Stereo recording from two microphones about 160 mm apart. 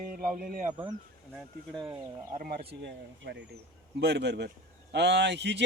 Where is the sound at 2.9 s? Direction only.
90° right.